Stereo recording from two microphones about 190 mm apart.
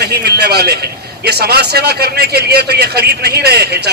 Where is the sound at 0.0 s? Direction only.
60° right (ahead or behind).